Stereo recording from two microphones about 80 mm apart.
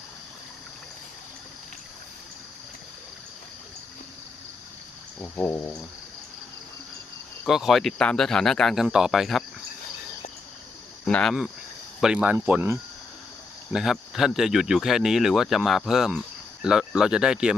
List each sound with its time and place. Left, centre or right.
5.2 s a sound: left
7.4 s speech: centre
11.0 s cricket: centre
11.9 s speech: centre
13.7 s speech: centre